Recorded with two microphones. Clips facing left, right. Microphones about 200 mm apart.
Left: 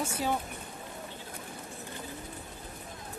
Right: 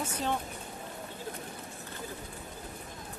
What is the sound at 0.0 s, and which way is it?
Speech, 10° left (ahead or behind).